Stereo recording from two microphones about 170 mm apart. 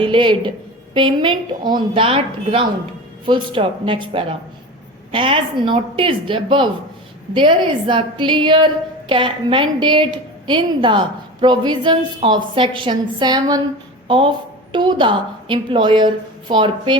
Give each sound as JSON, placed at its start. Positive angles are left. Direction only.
{"t": 0.0, "sound": "a woman's voice", "side_deg": -30}